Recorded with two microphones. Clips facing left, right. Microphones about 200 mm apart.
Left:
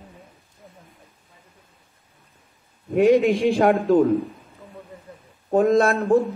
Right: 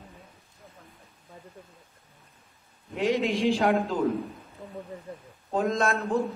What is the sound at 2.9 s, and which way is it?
Speech, 55° left (ahead or behind).